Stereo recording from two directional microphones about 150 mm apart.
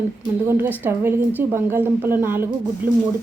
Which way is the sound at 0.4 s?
15° right (ahead or behind).